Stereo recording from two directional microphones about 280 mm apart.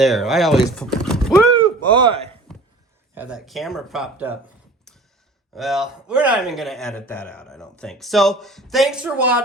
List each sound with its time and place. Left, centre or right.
0.0 s a man's voice: centre
1.9 s a man's voice: centre
3.2 s a man's voice: centre
4.9 s a sound: centre
5.5 s a man's voice: centre